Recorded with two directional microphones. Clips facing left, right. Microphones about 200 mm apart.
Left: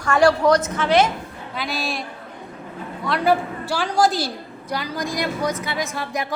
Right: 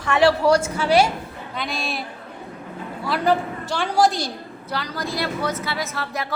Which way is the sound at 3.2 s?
10° left (ahead or behind).